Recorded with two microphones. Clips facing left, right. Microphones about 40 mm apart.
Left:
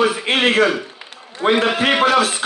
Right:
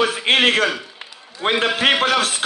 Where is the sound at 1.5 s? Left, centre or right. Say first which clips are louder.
Even; left.